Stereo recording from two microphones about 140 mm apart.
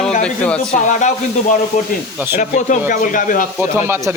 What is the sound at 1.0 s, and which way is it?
Speech, 60° left (ahead or behind).